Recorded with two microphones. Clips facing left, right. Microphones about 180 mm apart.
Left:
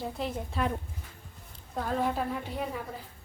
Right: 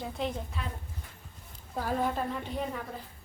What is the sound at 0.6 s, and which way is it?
Speech, 45° left (ahead or behind).